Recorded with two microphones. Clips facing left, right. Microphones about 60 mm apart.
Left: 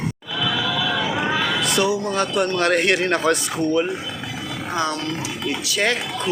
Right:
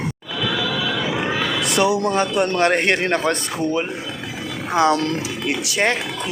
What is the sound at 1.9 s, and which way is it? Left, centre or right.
Speech, right.